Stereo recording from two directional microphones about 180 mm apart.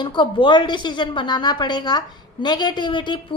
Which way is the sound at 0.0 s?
25° left (ahead or behind).